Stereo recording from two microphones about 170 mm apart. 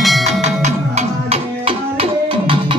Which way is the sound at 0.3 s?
45° right (ahead or behind).